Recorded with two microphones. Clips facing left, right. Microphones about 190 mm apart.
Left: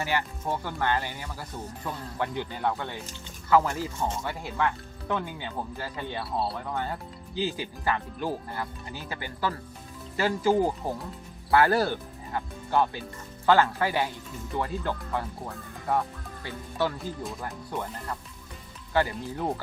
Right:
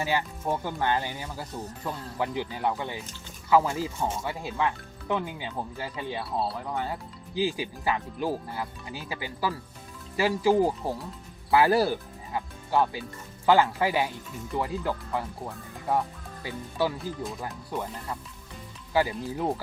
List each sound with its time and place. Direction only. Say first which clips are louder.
0.0 s speech: right 1 dB; 15° right (ahead or behind)